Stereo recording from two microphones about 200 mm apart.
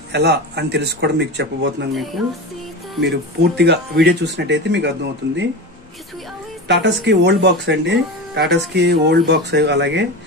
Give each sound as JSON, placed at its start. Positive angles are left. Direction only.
{"t": 0.1, "sound": "speech", "side_deg": -55}
{"t": 2.2, "sound": "music", "side_deg": 0}
{"t": 3.0, "sound": "speech", "side_deg": -55}
{"t": 7.1, "sound": "speech", "side_deg": -60}